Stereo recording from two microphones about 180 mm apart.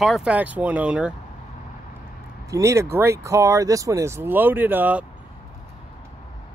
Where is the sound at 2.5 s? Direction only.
15° right (ahead or behind).